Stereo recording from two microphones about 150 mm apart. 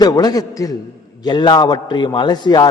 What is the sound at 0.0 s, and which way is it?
A man's voice, 25° left (ahead or behind).